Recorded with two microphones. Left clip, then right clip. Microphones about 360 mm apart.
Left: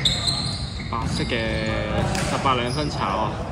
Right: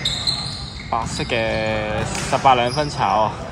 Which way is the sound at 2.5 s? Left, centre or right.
Right.